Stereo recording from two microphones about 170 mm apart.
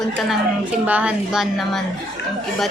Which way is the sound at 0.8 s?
10° right (ahead or behind).